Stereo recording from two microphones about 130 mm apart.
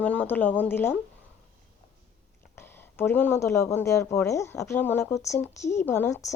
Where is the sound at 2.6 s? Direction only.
15° left (ahead or behind).